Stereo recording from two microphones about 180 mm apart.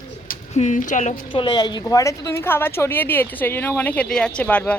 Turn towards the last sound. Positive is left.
turn(degrees=10)  # may be behind; listen again after turning